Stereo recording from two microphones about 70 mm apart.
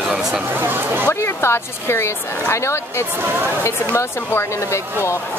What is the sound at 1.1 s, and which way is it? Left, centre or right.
Speech, left.